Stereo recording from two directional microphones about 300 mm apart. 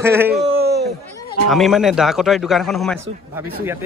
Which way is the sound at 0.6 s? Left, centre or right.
Right.